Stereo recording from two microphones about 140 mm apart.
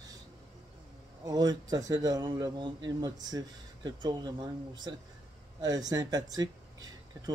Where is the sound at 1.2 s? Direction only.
25° right (ahead or behind).